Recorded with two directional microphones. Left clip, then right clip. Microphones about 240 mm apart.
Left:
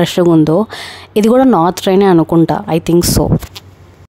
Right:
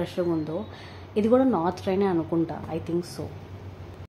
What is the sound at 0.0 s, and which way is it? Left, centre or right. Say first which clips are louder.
Speech: left 17 dB; left.